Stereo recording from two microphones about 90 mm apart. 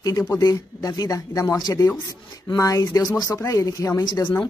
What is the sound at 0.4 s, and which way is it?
Speech, 45° left (ahead or behind).